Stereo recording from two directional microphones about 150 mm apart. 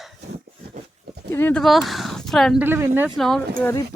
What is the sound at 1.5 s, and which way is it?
Speech, centre (ahead or behind).